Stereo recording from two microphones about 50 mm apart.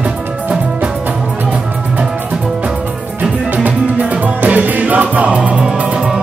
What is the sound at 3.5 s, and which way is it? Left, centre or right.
Music, right.